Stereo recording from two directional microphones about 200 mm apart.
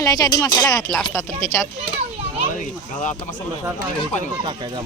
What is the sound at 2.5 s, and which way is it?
Speech, 40° left (ahead or behind).